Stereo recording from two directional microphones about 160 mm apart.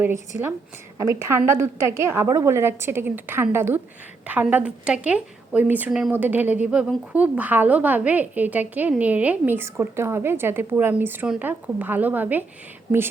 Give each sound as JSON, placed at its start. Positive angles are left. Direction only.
{"t": 0.0, "sound": "a woman's voice", "side_deg": -15}